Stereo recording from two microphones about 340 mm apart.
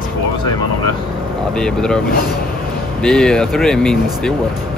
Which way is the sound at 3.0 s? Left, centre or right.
Centre.